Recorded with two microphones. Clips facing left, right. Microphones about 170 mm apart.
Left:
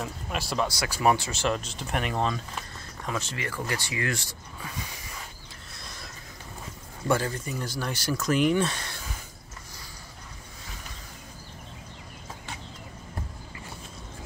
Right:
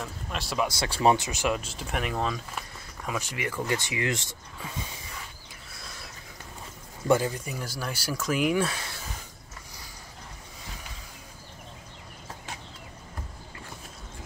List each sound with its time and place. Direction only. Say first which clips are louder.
0.0 s a sound: left 2 dB; 5° left (ahead or behind)
0.7 s speech: right 2 dB; 25° right (ahead or behind)
7.1 s speech: right 2 dB; 15° right (ahead or behind)